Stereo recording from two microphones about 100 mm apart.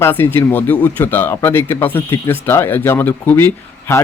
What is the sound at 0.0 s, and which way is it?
Speech, 20° left (ahead or behind).